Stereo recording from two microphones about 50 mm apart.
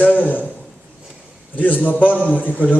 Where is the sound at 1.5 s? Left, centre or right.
Left.